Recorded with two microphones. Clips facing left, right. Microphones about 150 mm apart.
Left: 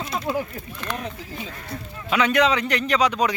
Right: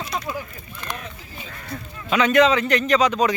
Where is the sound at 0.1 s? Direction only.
25° left (ahead or behind).